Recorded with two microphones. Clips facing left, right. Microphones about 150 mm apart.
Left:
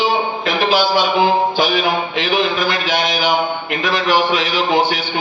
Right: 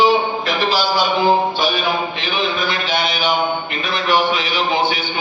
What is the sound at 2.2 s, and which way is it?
A man's voice, 85° left.